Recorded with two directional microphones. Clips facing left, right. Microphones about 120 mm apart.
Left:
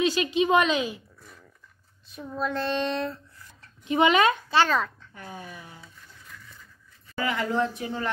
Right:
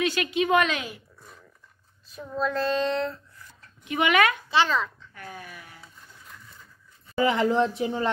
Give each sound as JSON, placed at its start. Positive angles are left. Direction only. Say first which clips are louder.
{"t": 0.0, "sound": "a woman's voice", "louder": "left 2 dB", "side_deg": 25}
{"t": 2.4, "sound": "a child's voice", "louder": "right 2 dB", "side_deg": 25}
{"t": 4.5, "sound": "a child's voice", "louder": "left 1 dB", "side_deg": 45}
{"t": 5.1, "sound": "speech", "louder": "left 1 dB", "side_deg": 25}
{"t": 7.2, "sound": "a woman's voice", "louder": "right 4 dB", "side_deg": -20}